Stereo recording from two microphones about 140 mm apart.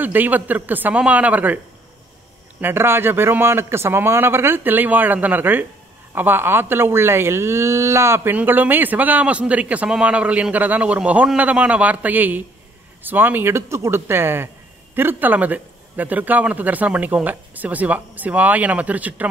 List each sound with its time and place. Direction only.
0.0 s speech: 10° right (ahead or behind)
2.6 s speech: 15° right (ahead or behind)